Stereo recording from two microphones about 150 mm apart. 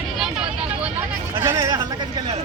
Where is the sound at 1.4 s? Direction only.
20° right (ahead or behind).